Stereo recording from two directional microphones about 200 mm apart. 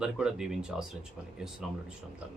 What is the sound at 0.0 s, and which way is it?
Speech, 5° right (ahead or behind).